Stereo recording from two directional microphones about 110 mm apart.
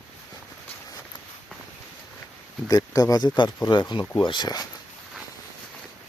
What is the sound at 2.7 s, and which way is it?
Speech, 35° left (ahead or behind).